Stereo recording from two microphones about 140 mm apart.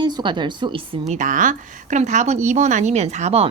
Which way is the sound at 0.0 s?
30° right (ahead or behind).